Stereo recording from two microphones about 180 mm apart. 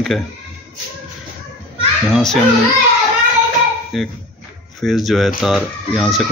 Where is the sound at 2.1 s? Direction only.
Centre (ahead or behind).